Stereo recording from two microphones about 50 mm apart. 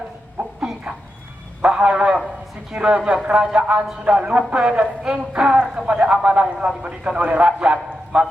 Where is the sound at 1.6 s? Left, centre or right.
Right.